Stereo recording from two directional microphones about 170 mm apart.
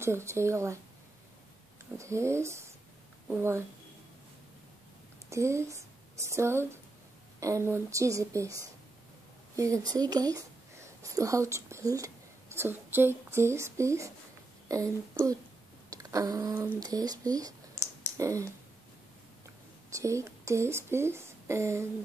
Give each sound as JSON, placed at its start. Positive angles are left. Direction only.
{"t": 0.0, "sound": "a woman's voice", "side_deg": -15}
{"t": 2.0, "sound": "a woman's voice", "side_deg": -15}
{"t": 5.3, "sound": "a woman's voice", "side_deg": -15}
{"t": 9.6, "sound": "speech", "side_deg": -20}
{"t": 19.9, "sound": "speech", "side_deg": -15}